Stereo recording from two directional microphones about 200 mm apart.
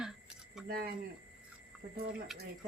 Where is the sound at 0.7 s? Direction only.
45° right (ahead or behind).